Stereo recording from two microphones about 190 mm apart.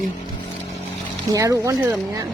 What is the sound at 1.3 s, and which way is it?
Speech, 15° right (ahead or behind).